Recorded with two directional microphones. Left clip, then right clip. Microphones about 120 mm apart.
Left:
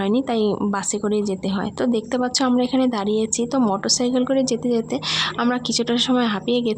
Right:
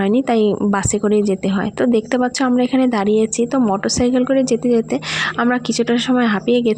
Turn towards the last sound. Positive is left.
turn(degrees=-35)  # may be behind; listen again after turning